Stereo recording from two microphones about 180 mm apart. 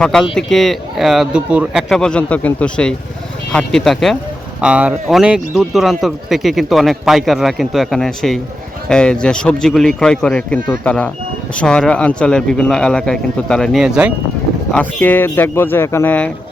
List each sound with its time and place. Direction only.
0.0 s speech: 5° left (ahead or behind)